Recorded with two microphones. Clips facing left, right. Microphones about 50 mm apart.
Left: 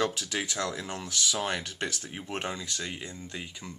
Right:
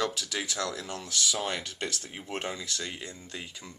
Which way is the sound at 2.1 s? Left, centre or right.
Left.